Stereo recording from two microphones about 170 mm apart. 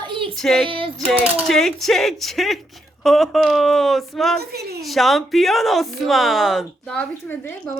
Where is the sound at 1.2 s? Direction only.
Centre (ahead or behind).